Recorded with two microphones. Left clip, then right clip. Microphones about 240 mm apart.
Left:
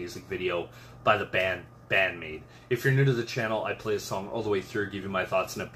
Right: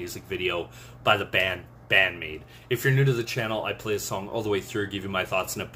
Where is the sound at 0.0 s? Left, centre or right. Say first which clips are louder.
Right 3 dB; centre.